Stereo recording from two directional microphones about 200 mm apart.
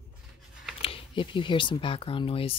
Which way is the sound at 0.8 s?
25° left (ahead or behind).